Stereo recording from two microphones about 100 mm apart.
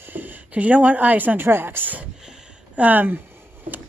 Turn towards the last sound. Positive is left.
turn(degrees=-20)  # may be behind; listen again after turning